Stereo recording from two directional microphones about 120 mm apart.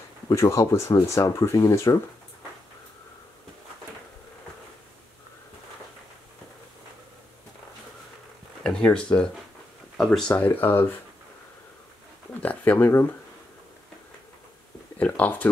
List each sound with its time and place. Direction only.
0.3 s speech: 25° left (ahead or behind)
8.6 s speech: 5° left (ahead or behind)
12.4 s speech: 15° left (ahead or behind)
15.0 s speech: 15° left (ahead or behind)